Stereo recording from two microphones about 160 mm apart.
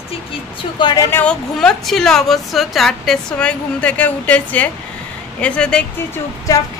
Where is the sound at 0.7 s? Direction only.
30° left (ahead or behind).